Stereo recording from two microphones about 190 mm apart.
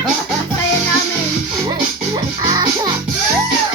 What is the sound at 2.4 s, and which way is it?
Music, 20° right (ahead or behind).